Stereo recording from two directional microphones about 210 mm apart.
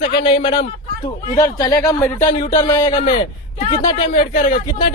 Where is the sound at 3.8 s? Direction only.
40° left (ahead or behind).